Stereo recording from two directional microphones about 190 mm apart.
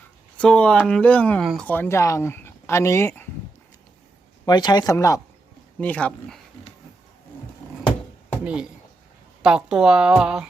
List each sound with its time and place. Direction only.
0.3 s speech: 5° left (ahead or behind)
4.4 s speech: 20° left (ahead or behind); by 6.4 s 5° left (ahead or behind)
9.4 s a woman's voice: 5° right (ahead or behind)